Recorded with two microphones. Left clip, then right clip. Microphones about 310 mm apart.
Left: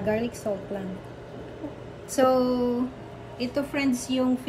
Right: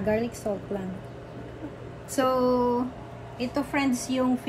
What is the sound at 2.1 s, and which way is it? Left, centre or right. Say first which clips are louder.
A woman's voice: left 1 dB; centre.